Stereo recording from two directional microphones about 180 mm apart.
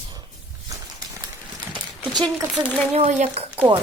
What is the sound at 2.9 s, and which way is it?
Speech, 40° right (ahead or behind).